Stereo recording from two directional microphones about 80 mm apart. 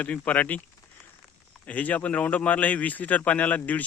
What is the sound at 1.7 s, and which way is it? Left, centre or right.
Speech, centre.